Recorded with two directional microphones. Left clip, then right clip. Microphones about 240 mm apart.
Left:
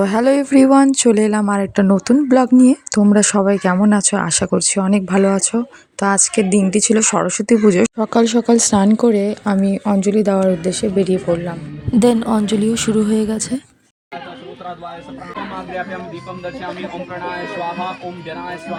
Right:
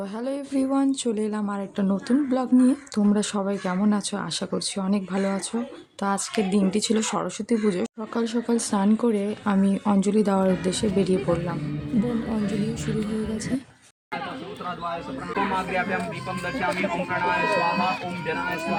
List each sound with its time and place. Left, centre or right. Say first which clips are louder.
0.0 s speech: left 16 dB; left; by 11.5 s centre
11.9 s a woman's voice: left 14 dB; left
17.2 s speech: right 2 dB; centre